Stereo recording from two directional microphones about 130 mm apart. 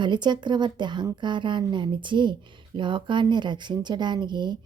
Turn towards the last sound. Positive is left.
turn(degrees=-35)  # may be behind; listen again after turning